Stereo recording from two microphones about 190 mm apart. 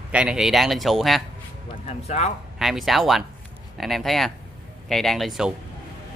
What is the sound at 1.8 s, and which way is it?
Speech, 35° left (ahead or behind).